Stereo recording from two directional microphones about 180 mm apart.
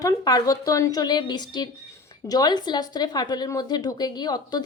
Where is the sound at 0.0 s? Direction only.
20° left (ahead or behind).